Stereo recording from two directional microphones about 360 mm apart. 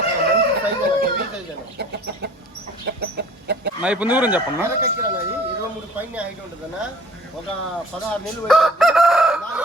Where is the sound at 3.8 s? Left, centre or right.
Centre.